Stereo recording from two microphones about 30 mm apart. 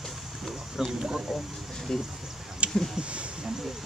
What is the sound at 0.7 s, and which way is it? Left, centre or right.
Speech, centre.